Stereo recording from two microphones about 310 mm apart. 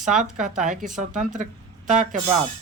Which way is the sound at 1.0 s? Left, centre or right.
Right.